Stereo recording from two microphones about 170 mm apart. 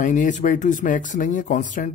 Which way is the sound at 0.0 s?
50° left (ahead or behind).